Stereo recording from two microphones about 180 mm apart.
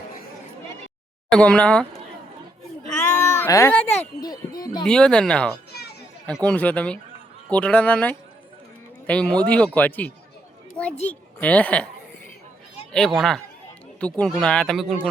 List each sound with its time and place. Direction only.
1.3 s speech: 5° left (ahead or behind)
2.9 s baby cry: 15° left (ahead or behind)
4.2 s speech: 20° left (ahead or behind)
4.8 s speech: 5° left (ahead or behind)
5.7 s children playing: 60° left (ahead or behind)
6.2 s speech: 5° left (ahead or behind)
11.1 s speech: 10° left (ahead or behind)
12.9 s speech: centre (ahead or behind)